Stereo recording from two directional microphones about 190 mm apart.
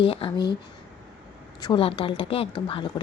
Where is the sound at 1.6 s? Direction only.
25° left (ahead or behind).